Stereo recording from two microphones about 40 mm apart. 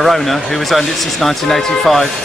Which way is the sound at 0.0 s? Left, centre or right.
Centre.